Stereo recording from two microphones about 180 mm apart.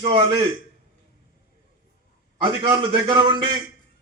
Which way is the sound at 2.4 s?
25° right (ahead or behind).